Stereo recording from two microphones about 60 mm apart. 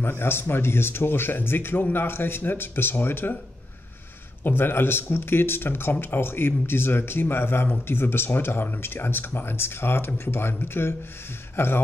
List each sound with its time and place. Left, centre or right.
0.0 s speech: left
4.4 s speech: left